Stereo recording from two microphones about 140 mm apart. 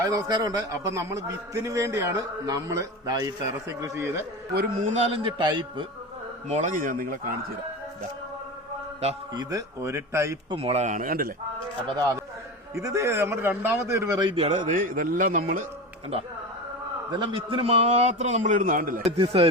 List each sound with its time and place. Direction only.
0.0 s a man's voice: 25° right (ahead or behind)
4.5 s a man's voice: 90° right
5.1 s a man's voice: 35° right (ahead or behind)
6.5 s a man's voice: 60° right (ahead or behind); by 7.3 s 90° right
9.3 s a man's voice: 30° right (ahead or behind)
10.5 s a man's voice: 45° right (ahead or behind); by 11.3 s 90° right
12.7 s a man's voice: 20° right (ahead or behind)
14.2 s a man's voice: 40° right (ahead or behind)
14.6 s a man's voice: 75° right (ahead or behind)
16.1 s a man's voice: 45° right (ahead or behind); by 19.0 s 80° right
19.2 s a man's voice: 40° right (ahead or behind)